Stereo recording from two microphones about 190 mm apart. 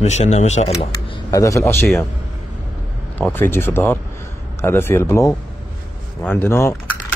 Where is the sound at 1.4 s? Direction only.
15° left (ahead or behind).